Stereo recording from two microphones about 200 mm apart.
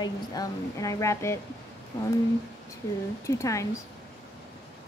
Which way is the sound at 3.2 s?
15° left (ahead or behind).